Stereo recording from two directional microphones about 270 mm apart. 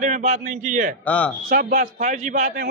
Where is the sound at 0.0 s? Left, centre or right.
Right.